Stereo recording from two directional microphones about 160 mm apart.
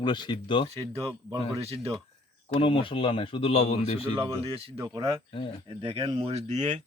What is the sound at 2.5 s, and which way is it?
Speech, 35° left (ahead or behind).